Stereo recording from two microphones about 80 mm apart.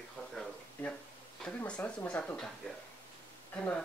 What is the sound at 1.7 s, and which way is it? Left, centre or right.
Speech, centre.